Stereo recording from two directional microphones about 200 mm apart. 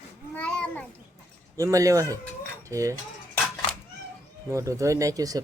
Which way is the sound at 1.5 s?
15° right (ahead or behind).